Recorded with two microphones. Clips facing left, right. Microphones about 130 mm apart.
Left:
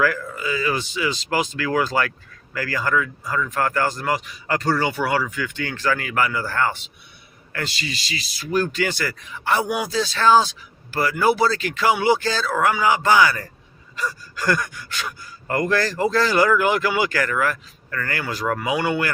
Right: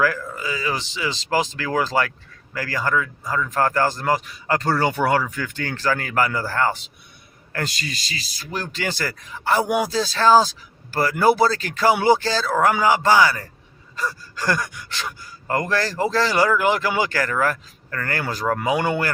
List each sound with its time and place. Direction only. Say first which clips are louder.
0.0 s speech: even; 30° right (ahead or behind)
7.5 s speech: right 1 dB; 45° right (ahead or behind)
8.5 s speech: left 5 dB; 30° right (ahead or behind)